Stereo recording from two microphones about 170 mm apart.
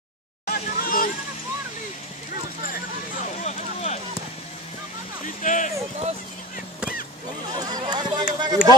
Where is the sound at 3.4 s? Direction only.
40° left (ahead or behind).